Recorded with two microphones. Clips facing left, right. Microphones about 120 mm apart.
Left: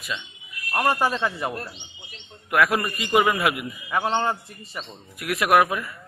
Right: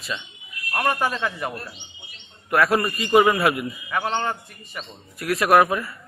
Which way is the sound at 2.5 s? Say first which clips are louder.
Right 2 dB; 5° left (ahead or behind).